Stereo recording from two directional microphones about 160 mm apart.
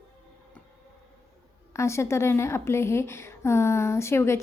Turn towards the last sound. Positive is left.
turn(degrees=15)  # may be behind; listen again after turning